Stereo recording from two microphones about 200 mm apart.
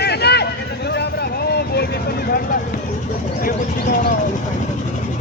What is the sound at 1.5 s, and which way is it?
Vehicle, 55° left (ahead or behind).